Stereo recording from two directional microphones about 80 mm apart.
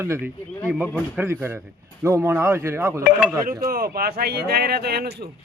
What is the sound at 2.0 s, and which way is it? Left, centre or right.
A man's voice, right.